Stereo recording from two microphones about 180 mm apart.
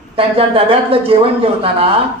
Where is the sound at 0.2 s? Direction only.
30° right (ahead or behind).